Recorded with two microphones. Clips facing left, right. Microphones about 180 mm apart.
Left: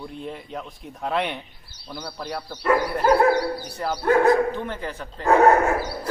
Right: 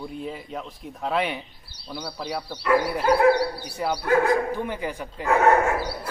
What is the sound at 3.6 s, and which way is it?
Speech, 5° right (ahead or behind).